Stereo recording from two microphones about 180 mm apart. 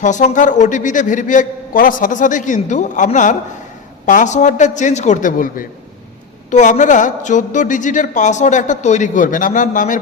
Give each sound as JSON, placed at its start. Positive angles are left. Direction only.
{"t": 0.0, "sound": "a woman's voice", "side_deg": 40}